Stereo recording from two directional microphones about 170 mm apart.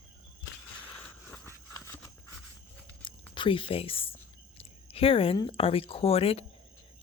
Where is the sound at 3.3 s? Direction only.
30° left (ahead or behind).